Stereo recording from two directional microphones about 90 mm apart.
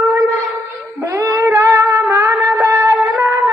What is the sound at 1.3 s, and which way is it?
Music, 25° right (ahead or behind).